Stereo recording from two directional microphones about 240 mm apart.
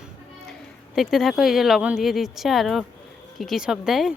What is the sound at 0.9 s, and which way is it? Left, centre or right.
Speech, centre.